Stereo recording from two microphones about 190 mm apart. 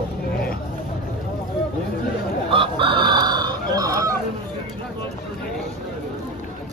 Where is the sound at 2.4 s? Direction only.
25° right (ahead or behind).